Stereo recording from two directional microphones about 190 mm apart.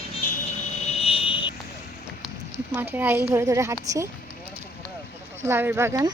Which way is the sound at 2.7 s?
10° right (ahead or behind).